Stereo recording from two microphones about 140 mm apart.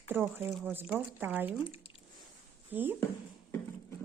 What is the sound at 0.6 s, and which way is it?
Speech, 15° right (ahead or behind).